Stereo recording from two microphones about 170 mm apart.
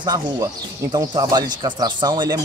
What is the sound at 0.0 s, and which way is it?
Speech, 25° right (ahead or behind).